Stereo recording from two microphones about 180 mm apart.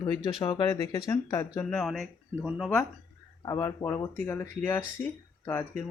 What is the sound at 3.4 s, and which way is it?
Speech, 20° left (ahead or behind).